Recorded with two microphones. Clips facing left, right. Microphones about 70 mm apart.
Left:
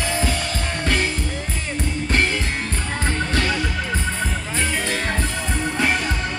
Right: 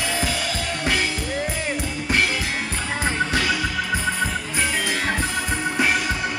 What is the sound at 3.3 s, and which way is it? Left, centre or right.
Music, centre.